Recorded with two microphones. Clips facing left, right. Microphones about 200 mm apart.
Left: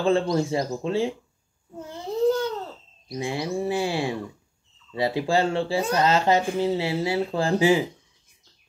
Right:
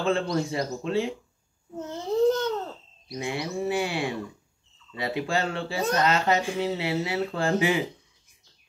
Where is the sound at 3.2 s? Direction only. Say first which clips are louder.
Left 2 dB; 30° left (ahead or behind).